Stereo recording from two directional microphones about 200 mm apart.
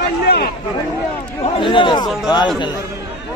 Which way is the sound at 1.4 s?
25° left (ahead or behind).